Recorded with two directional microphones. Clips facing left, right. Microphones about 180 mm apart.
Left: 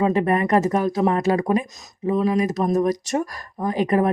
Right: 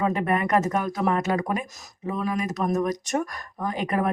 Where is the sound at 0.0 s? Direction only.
30° left (ahead or behind).